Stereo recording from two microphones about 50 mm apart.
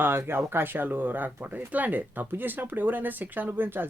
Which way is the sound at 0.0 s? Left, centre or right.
Right.